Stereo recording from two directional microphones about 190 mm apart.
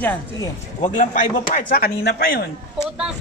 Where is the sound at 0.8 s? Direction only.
40° left (ahead or behind).